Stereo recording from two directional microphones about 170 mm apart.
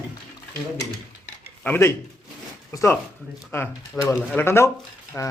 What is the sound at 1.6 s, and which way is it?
Speech, 10° left (ahead or behind).